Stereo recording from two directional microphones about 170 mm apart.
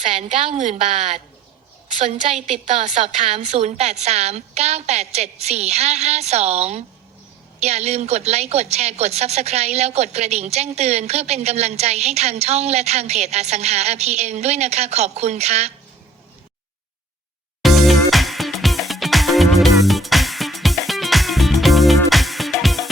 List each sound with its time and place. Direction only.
0.2 s a woman's voice: 35° right (ahead or behind)
17.6 s music: centre (ahead or behind)